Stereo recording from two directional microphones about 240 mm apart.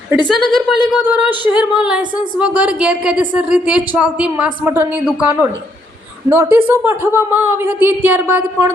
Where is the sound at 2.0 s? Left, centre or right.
Centre.